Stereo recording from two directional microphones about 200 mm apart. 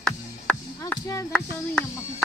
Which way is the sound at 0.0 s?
5° left (ahead or behind).